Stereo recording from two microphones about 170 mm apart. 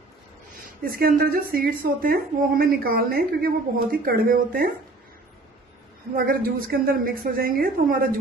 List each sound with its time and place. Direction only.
0.8 s a woman's voice: 60° right (ahead or behind)
6.1 s a woman's voice: 60° right (ahead or behind)